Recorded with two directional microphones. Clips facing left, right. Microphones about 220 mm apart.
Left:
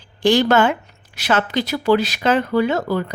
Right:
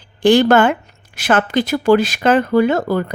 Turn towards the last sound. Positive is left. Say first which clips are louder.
# right 4 dB
turn(degrees=-50)  # may be behind; listen again after turning